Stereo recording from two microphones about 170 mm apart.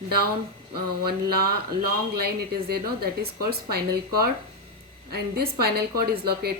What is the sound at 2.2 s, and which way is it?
A woman's voice, 65° right (ahead or behind).